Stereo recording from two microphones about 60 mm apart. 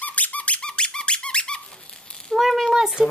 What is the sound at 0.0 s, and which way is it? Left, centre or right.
Squeak, left.